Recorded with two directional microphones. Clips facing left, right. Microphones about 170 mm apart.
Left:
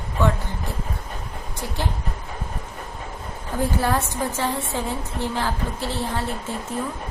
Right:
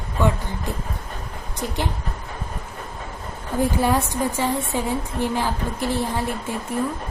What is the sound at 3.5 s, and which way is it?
A woman's voice, 15° right (ahead or behind).